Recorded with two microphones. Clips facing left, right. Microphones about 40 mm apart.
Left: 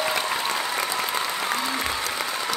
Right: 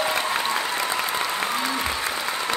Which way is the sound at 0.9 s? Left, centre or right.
Right.